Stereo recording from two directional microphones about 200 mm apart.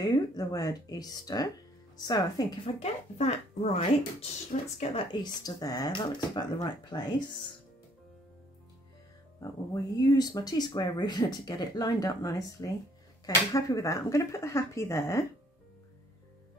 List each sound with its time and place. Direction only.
0.0 s speech: 20° left (ahead or behind)
9.4 s speech: 20° left (ahead or behind)